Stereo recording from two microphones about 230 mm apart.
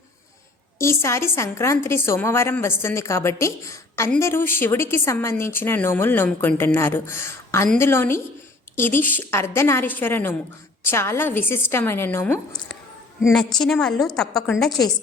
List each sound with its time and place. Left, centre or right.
0.8 s a woman's voice: centre